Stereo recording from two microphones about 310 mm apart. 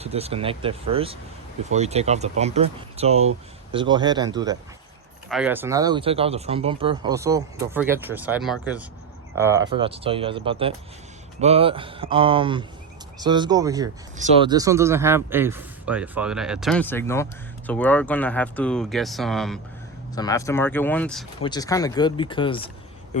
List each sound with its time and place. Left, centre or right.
0.0 s speech: centre